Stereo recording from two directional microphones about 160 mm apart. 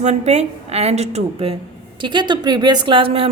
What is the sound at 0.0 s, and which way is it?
A woman's voice, 45° right (ahead or behind).